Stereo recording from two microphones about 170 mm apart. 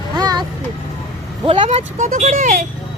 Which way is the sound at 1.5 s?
35° right (ahead or behind).